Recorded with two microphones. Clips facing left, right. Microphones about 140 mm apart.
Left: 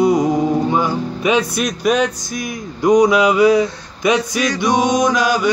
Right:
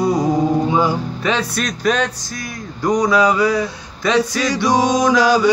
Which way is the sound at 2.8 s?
20° left (ahead or behind).